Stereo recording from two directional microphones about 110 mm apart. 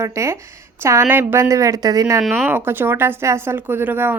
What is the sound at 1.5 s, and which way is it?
Speech, 30° right (ahead or behind).